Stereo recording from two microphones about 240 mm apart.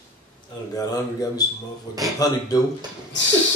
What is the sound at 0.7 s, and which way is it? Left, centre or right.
Speech, centre.